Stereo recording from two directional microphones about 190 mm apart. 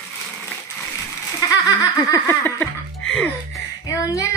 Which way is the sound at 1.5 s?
20° left (ahead or behind).